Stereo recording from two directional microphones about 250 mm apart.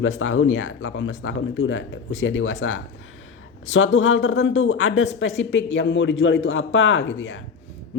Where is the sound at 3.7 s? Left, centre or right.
Left.